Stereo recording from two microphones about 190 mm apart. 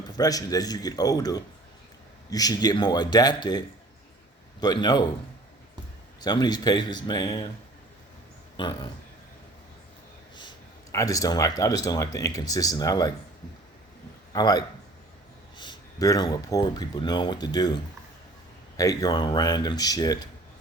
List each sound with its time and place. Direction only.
0.2 s speech: 20° left (ahead or behind)
4.6 s speech: 20° left (ahead or behind)
6.2 s speech: 20° left (ahead or behind)
8.5 s speech: 25° left (ahead or behind)
10.9 s speech: 20° left (ahead or behind)
14.3 s speech: 20° left (ahead or behind)
18.8 s speech: 20° left (ahead or behind)